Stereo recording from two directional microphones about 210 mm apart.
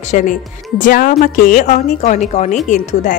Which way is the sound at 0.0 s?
35° left (ahead or behind).